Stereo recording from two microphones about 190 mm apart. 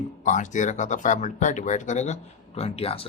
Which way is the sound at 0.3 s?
40° left (ahead or behind).